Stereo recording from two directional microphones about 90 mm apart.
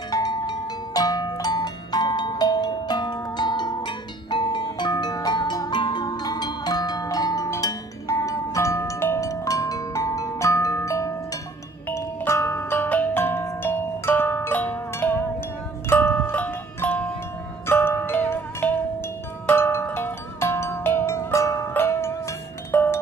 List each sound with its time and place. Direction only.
0.1 s music: 50° left (ahead or behind); by 22.9 s 20° left (ahead or behind)